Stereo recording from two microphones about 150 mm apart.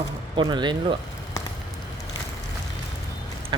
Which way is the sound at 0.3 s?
30° right (ahead or behind).